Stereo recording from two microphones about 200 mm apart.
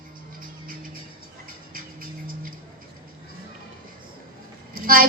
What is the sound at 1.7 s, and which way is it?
Music, 45° right (ahead or behind).